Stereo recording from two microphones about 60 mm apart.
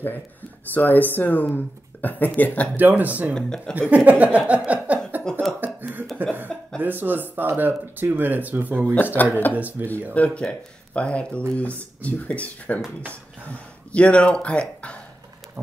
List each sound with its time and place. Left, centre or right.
0.7 s speech: left
2.7 s speech: right
3.3 s speech: centre
3.9 s speech: right
4.6 s a sound: right
5.6 s cough: right
6.2 s speech: right
9.1 s speech: left
9.5 s speech: right
10.1 s speech: left